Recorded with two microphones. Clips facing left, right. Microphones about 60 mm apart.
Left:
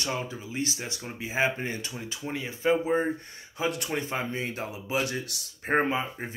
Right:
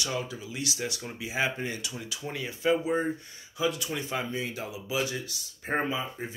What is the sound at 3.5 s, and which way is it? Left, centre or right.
Speech, left.